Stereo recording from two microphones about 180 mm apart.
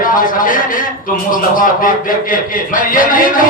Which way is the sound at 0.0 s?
50° left (ahead or behind).